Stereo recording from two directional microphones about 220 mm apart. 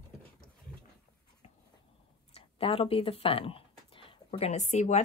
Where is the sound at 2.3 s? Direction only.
25° left (ahead or behind).